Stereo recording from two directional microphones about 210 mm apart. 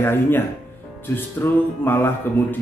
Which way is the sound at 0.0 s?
10° left (ahead or behind).